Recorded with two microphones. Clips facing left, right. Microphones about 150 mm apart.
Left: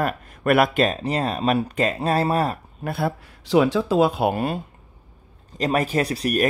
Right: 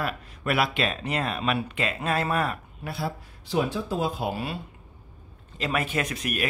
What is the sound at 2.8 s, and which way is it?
Speech, 55° left (ahead or behind).